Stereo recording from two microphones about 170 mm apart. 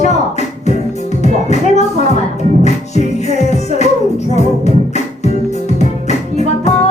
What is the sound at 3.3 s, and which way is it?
Music, 40° left (ahead or behind).